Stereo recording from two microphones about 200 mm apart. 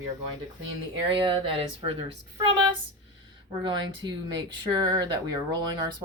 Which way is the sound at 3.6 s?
20° right (ahead or behind).